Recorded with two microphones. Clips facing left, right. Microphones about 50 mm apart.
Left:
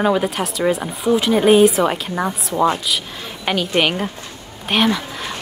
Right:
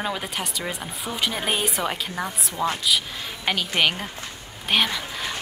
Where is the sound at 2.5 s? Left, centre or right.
Left.